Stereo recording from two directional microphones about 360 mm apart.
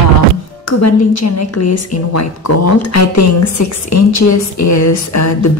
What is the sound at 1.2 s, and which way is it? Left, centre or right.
A woman's voice, left.